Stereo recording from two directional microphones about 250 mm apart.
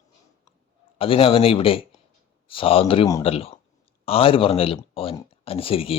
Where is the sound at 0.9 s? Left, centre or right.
Left.